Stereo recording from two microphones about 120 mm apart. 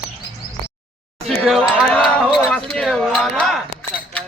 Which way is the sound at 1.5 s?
5° left (ahead or behind).